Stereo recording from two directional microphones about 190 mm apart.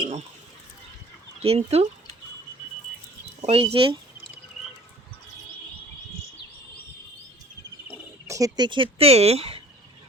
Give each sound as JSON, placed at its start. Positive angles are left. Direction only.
{"t": 1.4, "sound": "speech", "side_deg": -30}
{"t": 3.4, "sound": "speech", "side_deg": -30}
{"t": 7.9, "sound": "speech", "side_deg": -15}